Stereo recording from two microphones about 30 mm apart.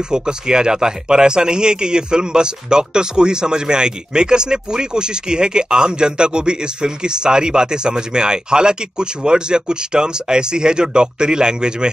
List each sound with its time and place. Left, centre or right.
0.1 s a man's voice: right